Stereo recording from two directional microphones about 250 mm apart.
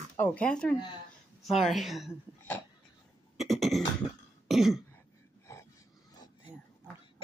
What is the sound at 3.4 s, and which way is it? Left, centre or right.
Beatboxing, centre.